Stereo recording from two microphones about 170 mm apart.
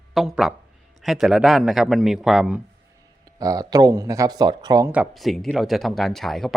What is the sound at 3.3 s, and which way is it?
Speech, 20° right (ahead or behind).